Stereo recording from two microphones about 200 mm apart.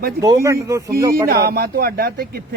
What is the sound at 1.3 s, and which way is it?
Speech, 50° right (ahead or behind).